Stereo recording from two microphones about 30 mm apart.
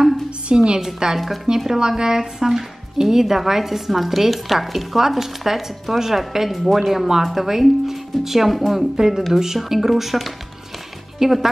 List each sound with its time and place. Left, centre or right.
0.5 s a woman's voice: right
0.7 s a woman's voice: centre
1.1 s speech: centre
1.7 s speech: right; by 8.7 s centre
8.9 s speech: centre